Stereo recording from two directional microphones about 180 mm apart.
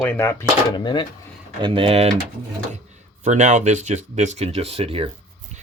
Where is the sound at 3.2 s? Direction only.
40° right (ahead or behind).